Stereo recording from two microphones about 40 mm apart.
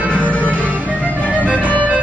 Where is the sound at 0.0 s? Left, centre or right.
Right.